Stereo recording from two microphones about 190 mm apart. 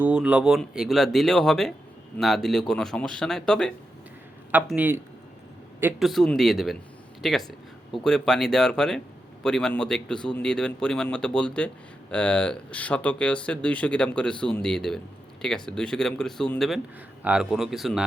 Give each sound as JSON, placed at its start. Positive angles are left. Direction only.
{"t": 0.0, "sound": "speech", "side_deg": -5}
{"t": 4.5, "sound": "speech", "side_deg": -10}
{"t": 6.0, "sound": "speech", "side_deg": 0}